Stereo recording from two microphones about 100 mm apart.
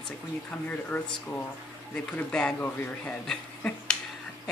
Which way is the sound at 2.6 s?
20° left (ahead or behind).